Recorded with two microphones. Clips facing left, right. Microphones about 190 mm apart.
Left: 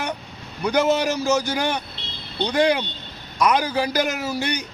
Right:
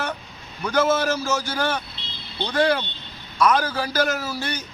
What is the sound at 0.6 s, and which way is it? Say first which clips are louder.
A man's voice: left 1 dB; 15° left (ahead or behind).